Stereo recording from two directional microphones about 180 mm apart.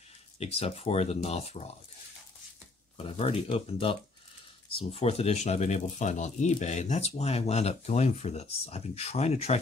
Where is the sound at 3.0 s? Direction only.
30° left (ahead or behind).